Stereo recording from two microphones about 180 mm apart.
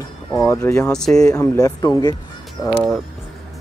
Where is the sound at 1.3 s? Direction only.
20° left (ahead or behind).